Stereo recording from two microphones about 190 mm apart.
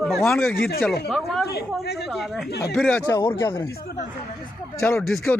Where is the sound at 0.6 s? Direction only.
50° left (ahead or behind).